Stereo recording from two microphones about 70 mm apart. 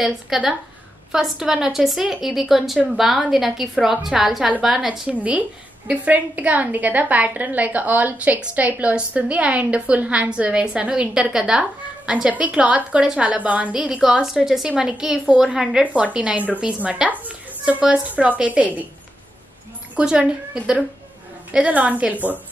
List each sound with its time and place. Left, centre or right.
0.3 s a woman's voice: centre; by 18.9 s right
20.0 s a woman's voice: centre